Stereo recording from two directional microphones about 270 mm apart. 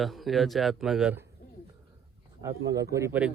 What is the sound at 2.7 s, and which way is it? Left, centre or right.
Speech, centre.